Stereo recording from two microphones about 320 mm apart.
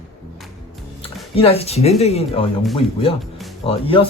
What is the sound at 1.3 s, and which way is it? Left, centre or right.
Speech, centre.